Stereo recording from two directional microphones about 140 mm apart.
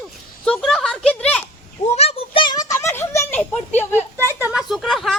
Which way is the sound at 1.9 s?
45° left (ahead or behind).